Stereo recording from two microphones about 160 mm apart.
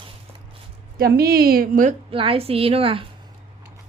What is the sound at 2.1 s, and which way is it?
Speech, 35° right (ahead or behind).